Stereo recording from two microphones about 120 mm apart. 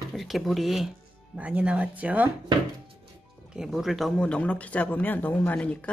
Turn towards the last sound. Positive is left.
turn(degrees=10)  # may be behind; listen again after turning